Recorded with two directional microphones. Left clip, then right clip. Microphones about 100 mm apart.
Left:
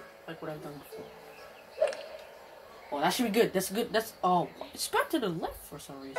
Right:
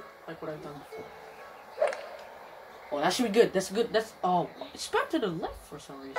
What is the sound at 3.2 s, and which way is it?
Speech, centre (ahead or behind).